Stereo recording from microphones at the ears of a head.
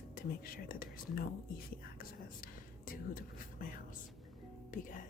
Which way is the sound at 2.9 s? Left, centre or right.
Left.